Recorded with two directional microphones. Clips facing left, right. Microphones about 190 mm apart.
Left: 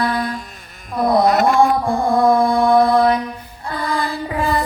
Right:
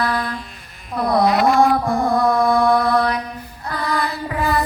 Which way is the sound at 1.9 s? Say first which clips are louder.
Left 3 dB; 30° left (ahead or behind).